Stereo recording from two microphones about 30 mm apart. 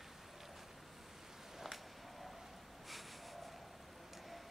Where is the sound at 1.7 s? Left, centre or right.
Centre.